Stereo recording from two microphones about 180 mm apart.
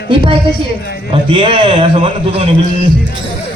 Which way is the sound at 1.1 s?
30° right (ahead or behind).